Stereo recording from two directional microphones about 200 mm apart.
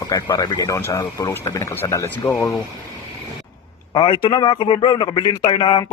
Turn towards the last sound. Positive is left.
turn(degrees=25)  # may be behind; listen again after turning